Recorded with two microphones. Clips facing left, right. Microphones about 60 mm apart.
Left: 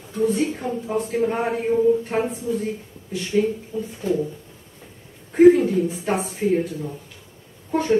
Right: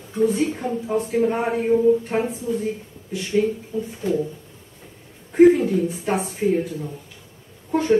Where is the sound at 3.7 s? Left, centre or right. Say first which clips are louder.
Right 1 dB; centre.